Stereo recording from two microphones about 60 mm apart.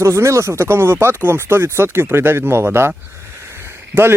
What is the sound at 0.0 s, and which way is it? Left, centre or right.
Speech, right.